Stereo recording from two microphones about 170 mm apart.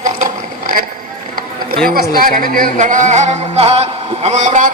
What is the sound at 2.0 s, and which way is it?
A man's voice, 55° right (ahead or behind).